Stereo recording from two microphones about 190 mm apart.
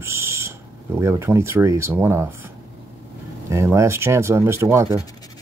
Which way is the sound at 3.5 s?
15° right (ahead or behind).